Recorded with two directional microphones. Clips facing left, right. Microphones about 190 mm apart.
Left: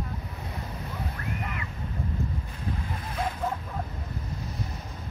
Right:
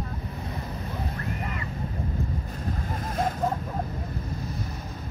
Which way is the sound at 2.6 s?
45° right (ahead or behind).